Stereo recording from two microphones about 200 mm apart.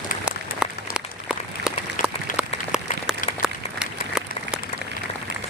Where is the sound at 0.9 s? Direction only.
5° right (ahead or behind).